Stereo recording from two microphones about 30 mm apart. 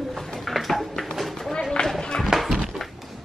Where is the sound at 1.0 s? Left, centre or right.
Centre.